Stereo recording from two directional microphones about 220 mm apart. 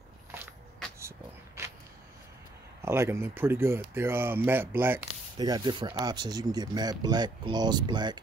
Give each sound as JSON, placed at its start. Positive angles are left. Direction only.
{"t": 2.8, "sound": "speech", "side_deg": -10}